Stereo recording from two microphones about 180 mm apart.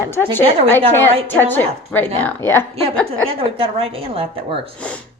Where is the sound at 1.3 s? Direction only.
10° left (ahead or behind).